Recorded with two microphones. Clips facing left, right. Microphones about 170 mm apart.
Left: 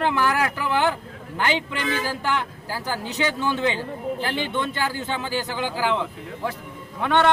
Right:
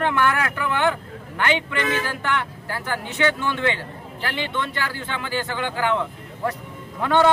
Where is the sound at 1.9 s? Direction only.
35° left (ahead or behind).